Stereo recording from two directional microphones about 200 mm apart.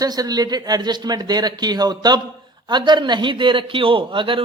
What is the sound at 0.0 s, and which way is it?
A man's voice, 20° right (ahead or behind).